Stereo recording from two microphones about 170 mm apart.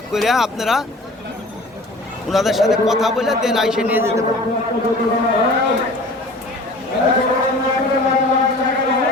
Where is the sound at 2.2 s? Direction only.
Centre (ahead or behind).